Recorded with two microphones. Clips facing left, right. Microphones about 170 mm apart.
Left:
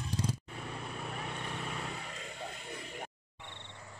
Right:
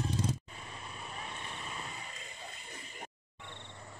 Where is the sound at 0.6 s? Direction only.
65° left (ahead or behind).